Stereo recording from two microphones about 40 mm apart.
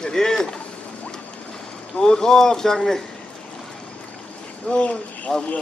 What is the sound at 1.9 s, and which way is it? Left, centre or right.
Speech, centre.